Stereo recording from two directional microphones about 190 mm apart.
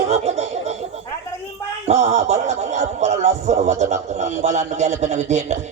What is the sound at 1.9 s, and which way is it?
A man's voice, 35° right (ahead or behind).